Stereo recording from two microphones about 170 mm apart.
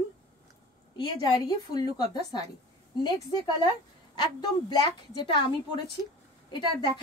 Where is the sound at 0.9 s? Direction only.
25° left (ahead or behind).